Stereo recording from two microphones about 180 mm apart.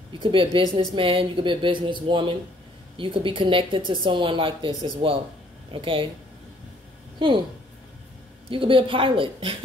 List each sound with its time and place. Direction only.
0.2 s a woman's voice: 30° right (ahead or behind)
7.2 s a woman's voice: 25° right (ahead or behind)
8.5 s a woman's voice: 30° right (ahead or behind)